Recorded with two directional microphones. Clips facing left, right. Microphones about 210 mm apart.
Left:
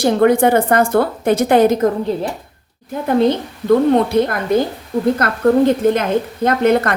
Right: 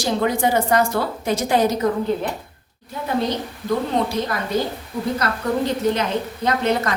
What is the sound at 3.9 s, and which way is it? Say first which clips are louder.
A woman's voice: left 7 dB; 55° left (ahead or behind).